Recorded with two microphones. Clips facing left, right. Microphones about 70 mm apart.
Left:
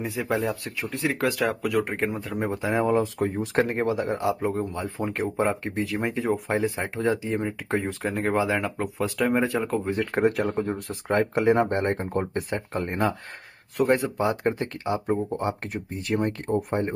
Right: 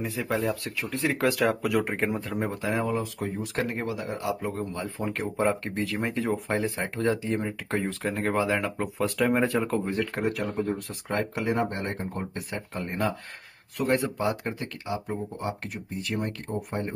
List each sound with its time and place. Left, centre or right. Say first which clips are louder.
0.0 s speech: left 2 dB; centre
0.9 s speech: even; centre
2.9 s speech: left 6 dB; left
5.2 s speech: left 1 dB; centre
10.2 s speech: left 4 dB; left
14.2 s speech: left 4 dB; left